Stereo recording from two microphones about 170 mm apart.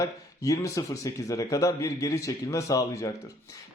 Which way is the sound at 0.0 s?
20° left (ahead or behind).